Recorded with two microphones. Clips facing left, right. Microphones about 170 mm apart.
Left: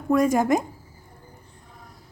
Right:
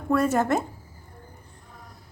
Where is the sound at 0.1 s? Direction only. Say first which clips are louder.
Left 3 dB; 10° left (ahead or behind).